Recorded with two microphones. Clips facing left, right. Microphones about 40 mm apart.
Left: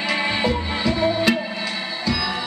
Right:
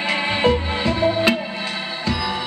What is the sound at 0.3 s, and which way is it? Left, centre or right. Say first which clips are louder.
Music: right 3 dB; right.